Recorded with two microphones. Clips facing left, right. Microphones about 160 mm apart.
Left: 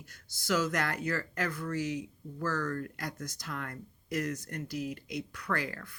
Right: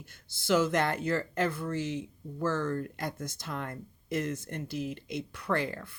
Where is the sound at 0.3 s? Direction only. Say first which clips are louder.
Right 4 dB; 25° right (ahead or behind).